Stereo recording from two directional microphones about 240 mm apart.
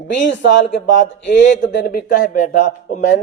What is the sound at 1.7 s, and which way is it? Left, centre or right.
Speech, left.